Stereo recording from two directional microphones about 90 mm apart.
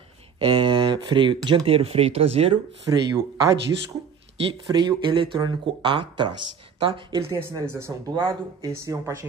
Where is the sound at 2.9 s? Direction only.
40° right (ahead or behind).